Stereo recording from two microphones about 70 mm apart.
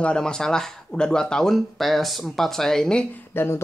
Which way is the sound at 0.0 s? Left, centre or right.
Centre.